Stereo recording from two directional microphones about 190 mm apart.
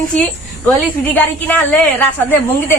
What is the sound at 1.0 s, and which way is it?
A woman's voice, 10° left (ahead or behind).